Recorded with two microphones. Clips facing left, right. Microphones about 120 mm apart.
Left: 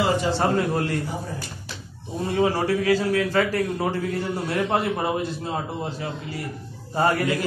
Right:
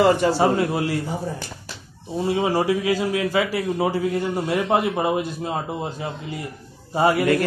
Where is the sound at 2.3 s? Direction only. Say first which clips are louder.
Even; 15° right (ahead or behind).